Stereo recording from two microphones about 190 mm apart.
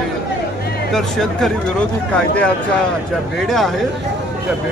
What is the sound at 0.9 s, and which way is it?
A man's voice, centre (ahead or behind).